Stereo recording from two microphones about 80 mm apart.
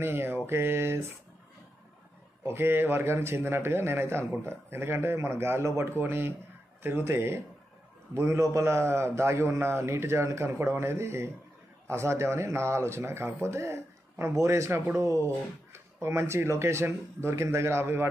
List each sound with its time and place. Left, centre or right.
0.0 s a man's voice: right
2.4 s a man's voice: right